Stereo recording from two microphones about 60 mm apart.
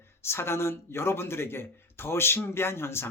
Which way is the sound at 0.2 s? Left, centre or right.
Left.